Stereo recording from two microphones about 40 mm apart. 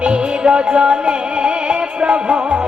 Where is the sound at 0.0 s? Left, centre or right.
Right.